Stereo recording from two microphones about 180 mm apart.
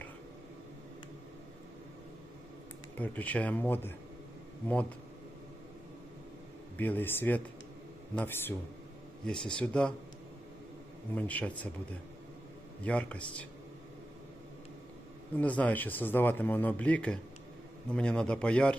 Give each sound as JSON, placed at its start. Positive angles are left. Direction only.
{"t": 3.0, "sound": "speech", "side_deg": 10}
{"t": 6.7, "sound": "a man's voice", "side_deg": 10}
{"t": 11.1, "sound": "speech", "side_deg": 10}
{"t": 12.8, "sound": "speech", "side_deg": 5}
{"t": 15.4, "sound": "a man's voice", "side_deg": 10}